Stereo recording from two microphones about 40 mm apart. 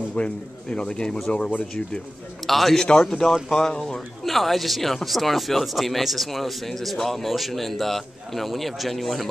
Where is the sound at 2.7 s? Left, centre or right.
Centre.